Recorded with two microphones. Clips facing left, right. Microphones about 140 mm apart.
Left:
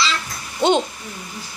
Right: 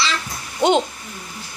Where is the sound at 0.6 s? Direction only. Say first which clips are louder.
Even; 15° right (ahead or behind).